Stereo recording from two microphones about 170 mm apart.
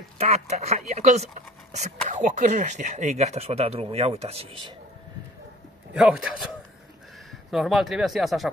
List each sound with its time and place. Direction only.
0.2 s speech: 40° right (ahead or behind)
5.9 s speech: 5° right (ahead or behind)
7.5 s speech: centre (ahead or behind)